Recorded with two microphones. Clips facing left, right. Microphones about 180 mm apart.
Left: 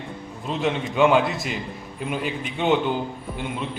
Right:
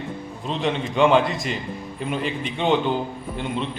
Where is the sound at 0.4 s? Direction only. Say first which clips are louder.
Even; 5° left (ahead or behind).